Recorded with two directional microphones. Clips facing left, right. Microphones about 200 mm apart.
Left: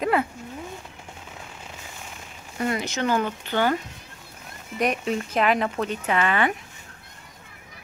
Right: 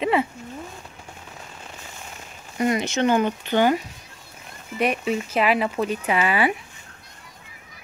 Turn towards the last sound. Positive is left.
turn(degrees=-10)  # may be behind; listen again after turning